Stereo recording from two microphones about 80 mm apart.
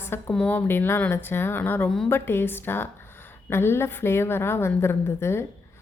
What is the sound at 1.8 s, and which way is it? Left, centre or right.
Speech, centre.